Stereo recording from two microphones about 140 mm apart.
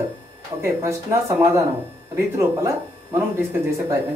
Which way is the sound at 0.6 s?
20° right (ahead or behind).